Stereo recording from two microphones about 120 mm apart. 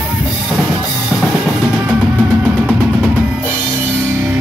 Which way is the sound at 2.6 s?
10° right (ahead or behind).